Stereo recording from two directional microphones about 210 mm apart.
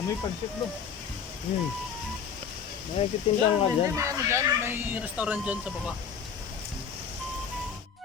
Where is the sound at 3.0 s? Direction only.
25° left (ahead or behind).